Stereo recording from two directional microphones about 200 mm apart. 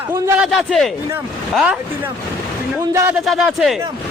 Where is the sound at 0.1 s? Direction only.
5° right (ahead or behind).